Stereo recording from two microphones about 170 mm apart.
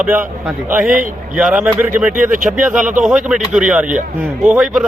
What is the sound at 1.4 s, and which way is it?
Speech, 5° right (ahead or behind).